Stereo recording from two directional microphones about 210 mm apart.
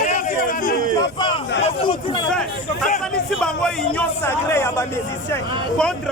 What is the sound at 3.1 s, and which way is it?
A man's voice, 5° left (ahead or behind).